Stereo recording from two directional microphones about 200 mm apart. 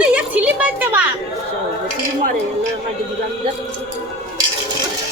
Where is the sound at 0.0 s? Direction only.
5° right (ahead or behind).